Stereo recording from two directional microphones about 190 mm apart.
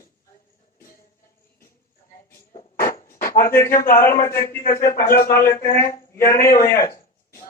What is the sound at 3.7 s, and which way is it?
Speech, 50° left (ahead or behind).